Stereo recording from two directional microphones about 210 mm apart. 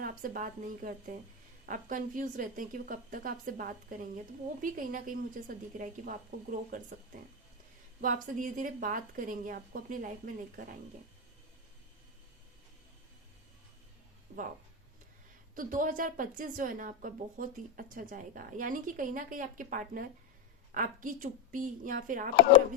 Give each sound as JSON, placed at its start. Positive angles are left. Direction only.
{"t": 0.0, "sound": "a woman's voice", "side_deg": -40}
{"t": 14.3, "sound": "speech", "side_deg": -50}
{"t": 15.5, "sound": "a woman's voice", "side_deg": -40}